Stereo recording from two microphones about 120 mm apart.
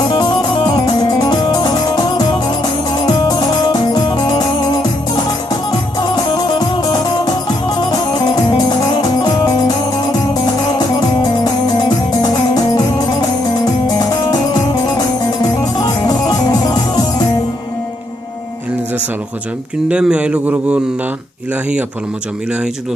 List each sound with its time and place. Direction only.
0.1 s music: 40° left (ahead or behind)
3.1 s music: 35° left (ahead or behind)
8.5 s music: 40° left (ahead or behind)
12.2 s music: 35° left (ahead or behind)
19.9 s a man's voice: 10° right (ahead or behind)